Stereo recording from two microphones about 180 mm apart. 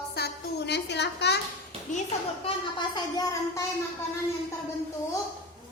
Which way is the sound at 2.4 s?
25° left (ahead or behind).